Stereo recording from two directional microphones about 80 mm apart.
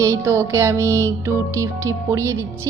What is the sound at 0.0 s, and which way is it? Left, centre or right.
A woman's voice, right.